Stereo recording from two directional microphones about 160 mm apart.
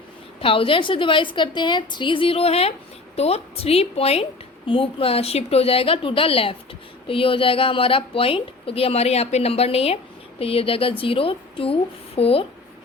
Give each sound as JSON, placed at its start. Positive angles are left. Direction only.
{"t": 0.3, "sound": "a woman's voice", "side_deg": 35}